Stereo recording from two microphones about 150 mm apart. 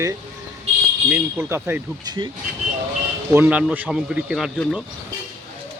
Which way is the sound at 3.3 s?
10° right (ahead or behind).